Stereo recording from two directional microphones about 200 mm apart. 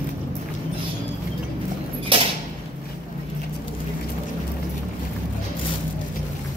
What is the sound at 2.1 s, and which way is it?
Creak, 25° right (ahead or behind).